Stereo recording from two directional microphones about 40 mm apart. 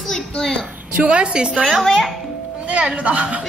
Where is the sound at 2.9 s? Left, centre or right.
Right.